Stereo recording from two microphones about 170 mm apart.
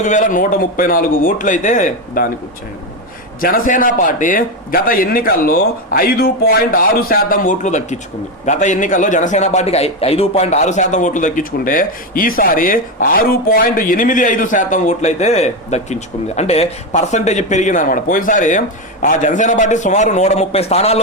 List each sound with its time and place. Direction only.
0.0 s a man's voice: 45° left (ahead or behind)
3.4 s a man's voice: 55° left (ahead or behind); by 21.0 s 40° left (ahead or behind)